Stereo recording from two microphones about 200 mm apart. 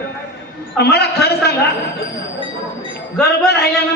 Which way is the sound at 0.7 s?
55° left (ahead or behind).